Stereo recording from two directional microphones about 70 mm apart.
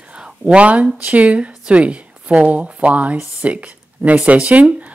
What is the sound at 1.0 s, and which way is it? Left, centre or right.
A woman's voice, right.